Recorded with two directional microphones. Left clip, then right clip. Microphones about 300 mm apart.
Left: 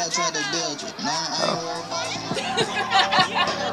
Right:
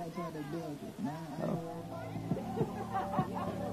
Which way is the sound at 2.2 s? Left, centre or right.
Centre.